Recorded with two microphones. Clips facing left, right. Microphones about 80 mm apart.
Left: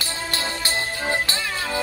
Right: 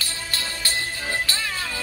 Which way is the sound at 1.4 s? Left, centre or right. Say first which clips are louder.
Left 2 dB; centre.